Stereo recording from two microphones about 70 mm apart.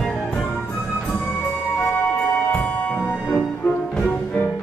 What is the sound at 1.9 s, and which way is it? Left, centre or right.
Music, left.